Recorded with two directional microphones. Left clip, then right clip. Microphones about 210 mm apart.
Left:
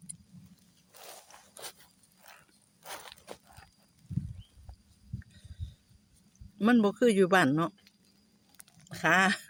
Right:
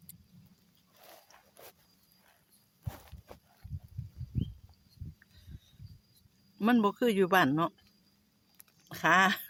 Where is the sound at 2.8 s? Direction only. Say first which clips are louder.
Left 7 dB; 45° left (ahead or behind).